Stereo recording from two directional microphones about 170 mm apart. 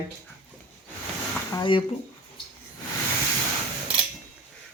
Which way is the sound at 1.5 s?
30° left (ahead or behind).